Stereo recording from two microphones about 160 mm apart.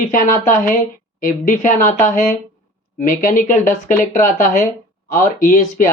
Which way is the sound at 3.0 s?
60° left (ahead or behind).